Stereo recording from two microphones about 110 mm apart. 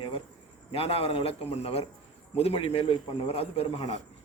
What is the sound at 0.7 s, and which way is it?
A man's voice, 60° left (ahead or behind).